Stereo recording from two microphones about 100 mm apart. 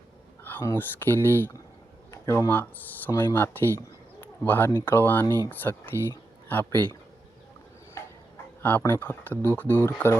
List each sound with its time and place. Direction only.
0.6 s speech: 25° left (ahead or behind)
8.8 s speech: 20° left (ahead or behind)